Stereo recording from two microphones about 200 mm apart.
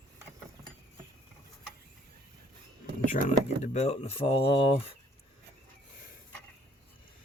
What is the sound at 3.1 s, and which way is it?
Speech, 40° left (ahead or behind).